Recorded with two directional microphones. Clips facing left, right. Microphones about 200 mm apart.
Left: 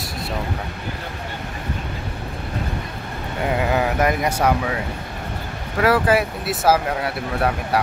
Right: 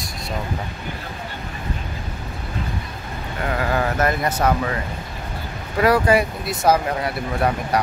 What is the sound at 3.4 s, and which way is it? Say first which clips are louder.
Speech: left 2 dB; 15° left (ahead or behind).